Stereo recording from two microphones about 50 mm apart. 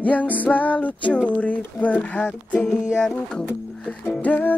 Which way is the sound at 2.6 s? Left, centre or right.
Centre.